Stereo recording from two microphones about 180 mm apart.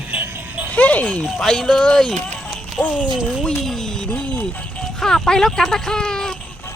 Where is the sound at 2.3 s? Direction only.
5° left (ahead or behind).